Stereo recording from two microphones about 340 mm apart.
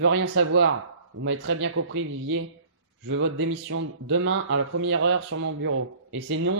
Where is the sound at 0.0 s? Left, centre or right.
Right.